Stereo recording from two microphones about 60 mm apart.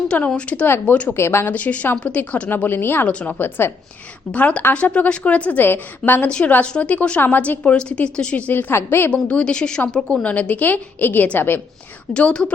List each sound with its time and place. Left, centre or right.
0.1 s a woman's voice: centre
1.1 s speech: left
1.5 s a woman's voice: left
2.6 s speech: left
3.1 s a woman's voice: centre
3.3 s speech: left
4.4 s a woman's voice: left
6.2 s a woman's voice: centre
7.6 s a woman's voice: centre; by 9.0 s left
9.2 s a woman's voice: centre; by 11.6 s left
12.1 s a woman's voice: centre